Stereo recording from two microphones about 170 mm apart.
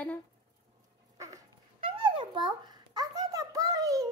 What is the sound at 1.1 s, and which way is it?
Dog, 20° right (ahead or behind).